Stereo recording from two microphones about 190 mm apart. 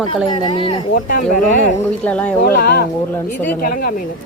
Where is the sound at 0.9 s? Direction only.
45° left (ahead or behind).